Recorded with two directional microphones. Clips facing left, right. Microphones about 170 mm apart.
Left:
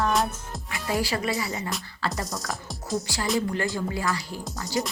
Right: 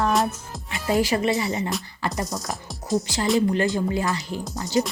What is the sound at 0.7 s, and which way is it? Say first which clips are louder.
Speech: right 5 dB; 20° right (ahead or behind).